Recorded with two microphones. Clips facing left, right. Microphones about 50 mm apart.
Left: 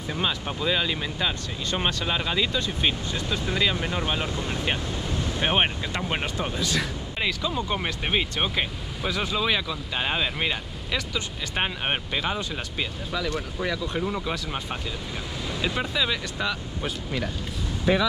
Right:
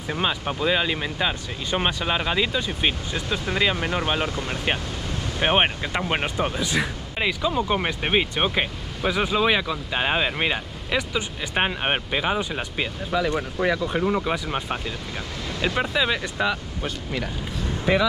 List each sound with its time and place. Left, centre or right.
0.1 s speech: centre
3.7 s speech: right